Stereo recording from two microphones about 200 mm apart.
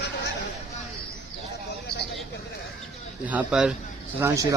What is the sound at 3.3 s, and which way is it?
Speech, 5° right (ahead or behind).